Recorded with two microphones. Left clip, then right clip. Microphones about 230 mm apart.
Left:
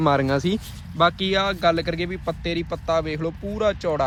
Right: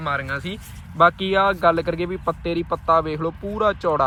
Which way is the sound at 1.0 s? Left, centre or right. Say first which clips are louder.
Right 3 dB; centre.